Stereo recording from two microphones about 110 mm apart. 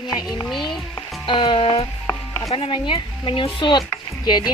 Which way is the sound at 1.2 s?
50° left (ahead or behind).